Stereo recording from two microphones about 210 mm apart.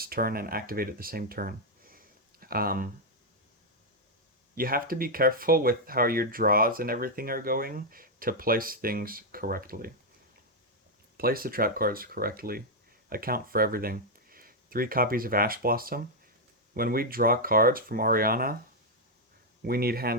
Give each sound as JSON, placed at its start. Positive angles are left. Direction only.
{"t": 0.0, "sound": "speech", "side_deg": -45}
{"t": 4.5, "sound": "speech", "side_deg": -45}
{"t": 11.2, "sound": "speech", "side_deg": -45}
{"t": 19.6, "sound": "speech", "side_deg": -45}